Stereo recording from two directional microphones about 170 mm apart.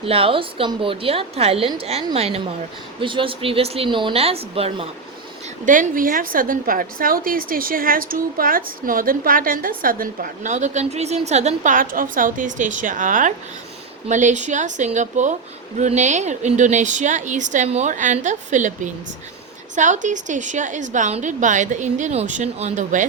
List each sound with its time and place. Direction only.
0.0 s a woman's voice: 35° right (ahead or behind)
5.6 s a woman's voice: 50° right (ahead or behind)
19.7 s a woman's voice: 45° right (ahead or behind)